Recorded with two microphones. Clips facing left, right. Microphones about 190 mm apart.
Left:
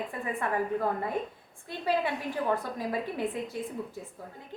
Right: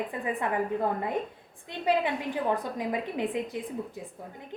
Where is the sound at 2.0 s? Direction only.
20° right (ahead or behind).